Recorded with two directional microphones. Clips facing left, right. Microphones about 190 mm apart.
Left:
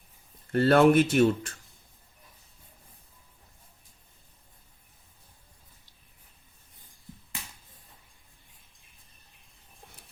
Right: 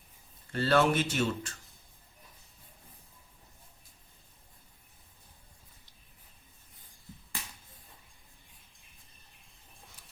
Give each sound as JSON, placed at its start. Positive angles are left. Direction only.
{"t": 0.5, "sound": "speech", "side_deg": 55}